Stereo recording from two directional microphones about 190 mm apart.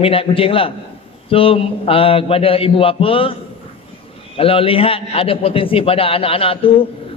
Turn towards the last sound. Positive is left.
turn(degrees=30)  # may be behind; listen again after turning